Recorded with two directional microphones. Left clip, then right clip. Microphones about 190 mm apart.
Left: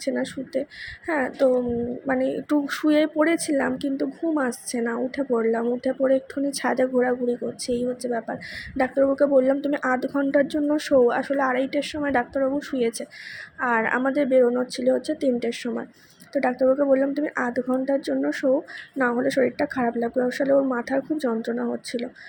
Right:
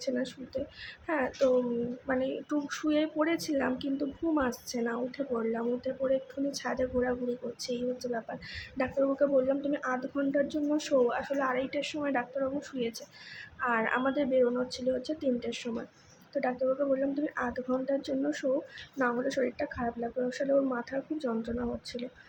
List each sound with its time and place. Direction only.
0.0 s speech: 30° left (ahead or behind)